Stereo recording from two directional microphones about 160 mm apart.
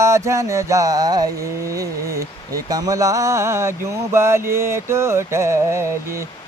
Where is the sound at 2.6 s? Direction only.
25° right (ahead or behind).